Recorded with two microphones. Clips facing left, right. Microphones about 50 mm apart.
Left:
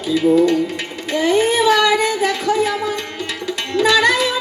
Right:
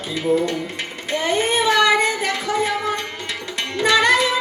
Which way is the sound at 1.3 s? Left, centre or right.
Right.